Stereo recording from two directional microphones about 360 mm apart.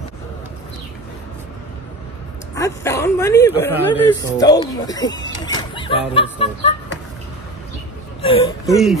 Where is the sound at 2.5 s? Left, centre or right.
Centre.